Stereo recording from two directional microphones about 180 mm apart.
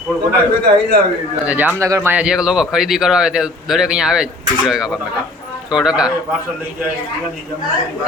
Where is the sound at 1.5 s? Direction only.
10° right (ahead or behind).